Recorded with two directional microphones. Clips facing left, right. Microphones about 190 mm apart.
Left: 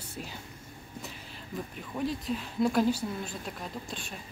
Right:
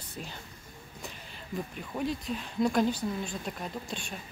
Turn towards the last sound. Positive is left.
turn(degrees=0)  # may be behind; listen again after turning